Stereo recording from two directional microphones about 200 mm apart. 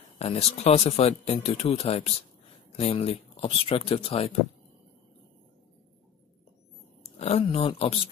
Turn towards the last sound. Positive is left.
turn(degrees=25)  # may be behind; listen again after turning